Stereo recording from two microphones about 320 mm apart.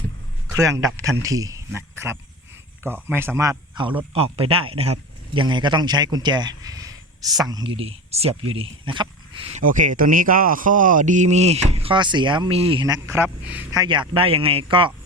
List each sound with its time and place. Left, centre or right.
0.4 s a man's voice: centre